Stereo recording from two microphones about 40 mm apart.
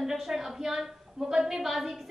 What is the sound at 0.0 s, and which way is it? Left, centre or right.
A woman's voice, centre.